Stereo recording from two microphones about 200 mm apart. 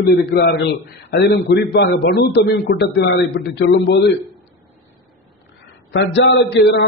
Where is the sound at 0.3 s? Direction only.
55° left (ahead or behind).